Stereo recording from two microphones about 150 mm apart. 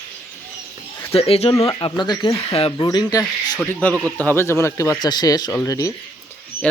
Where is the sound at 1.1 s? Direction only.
40° left (ahead or behind); by 3.6 s 25° left (ahead or behind).